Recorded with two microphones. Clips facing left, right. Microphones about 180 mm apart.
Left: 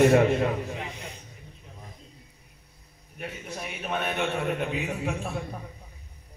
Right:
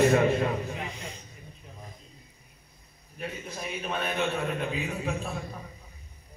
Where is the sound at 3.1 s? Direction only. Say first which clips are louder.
Even; 65° left (ahead or behind).